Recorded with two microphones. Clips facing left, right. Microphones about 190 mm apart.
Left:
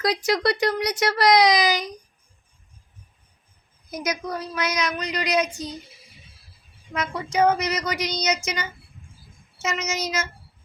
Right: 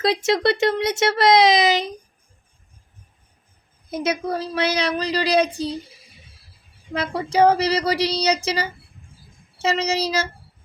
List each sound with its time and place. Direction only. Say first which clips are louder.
0.0 s speech: right 3 dB; 25° right (ahead or behind)
3.8 s a woman's voice: right 5 dB; 30° right (ahead or behind)
6.9 s a woman's voice: right 4 dB; 30° right (ahead or behind)